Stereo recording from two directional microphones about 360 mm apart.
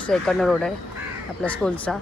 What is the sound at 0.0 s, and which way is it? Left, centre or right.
Speech, centre.